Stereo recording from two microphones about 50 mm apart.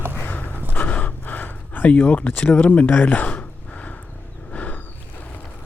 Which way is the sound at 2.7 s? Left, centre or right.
Left.